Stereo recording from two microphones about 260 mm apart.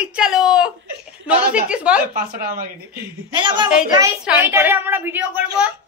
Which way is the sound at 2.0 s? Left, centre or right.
Right.